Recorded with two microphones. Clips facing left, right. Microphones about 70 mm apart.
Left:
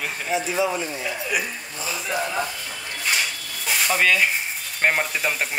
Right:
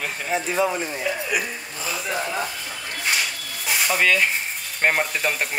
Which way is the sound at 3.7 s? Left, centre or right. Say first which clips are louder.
Even; centre.